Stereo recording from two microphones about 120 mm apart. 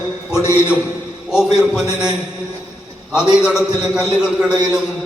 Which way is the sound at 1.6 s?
5° right (ahead or behind).